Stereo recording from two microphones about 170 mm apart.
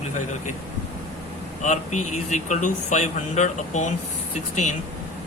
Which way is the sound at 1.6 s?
45° left (ahead or behind).